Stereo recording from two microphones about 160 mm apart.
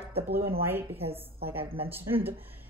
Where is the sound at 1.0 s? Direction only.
35° right (ahead or behind).